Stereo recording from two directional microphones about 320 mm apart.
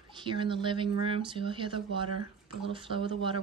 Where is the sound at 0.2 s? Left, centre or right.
Centre.